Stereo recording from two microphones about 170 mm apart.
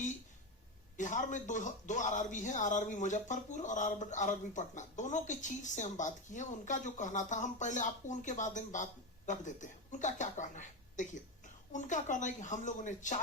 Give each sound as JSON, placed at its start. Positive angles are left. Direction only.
{"t": 0.9, "sound": "a man's voice", "side_deg": 45}